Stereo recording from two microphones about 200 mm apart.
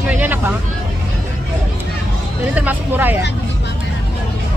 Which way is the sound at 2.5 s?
10° right (ahead or behind).